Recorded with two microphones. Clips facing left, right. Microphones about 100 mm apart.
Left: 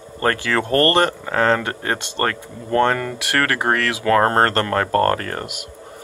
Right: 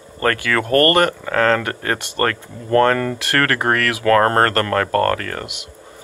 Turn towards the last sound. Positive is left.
turn(degrees=25)  # may be behind; listen again after turning